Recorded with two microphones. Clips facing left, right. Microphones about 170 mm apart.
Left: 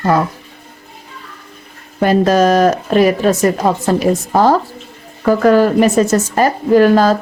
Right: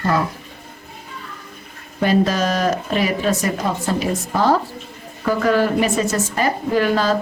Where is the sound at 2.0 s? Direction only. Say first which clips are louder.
Left 6 dB; 50° left (ahead or behind).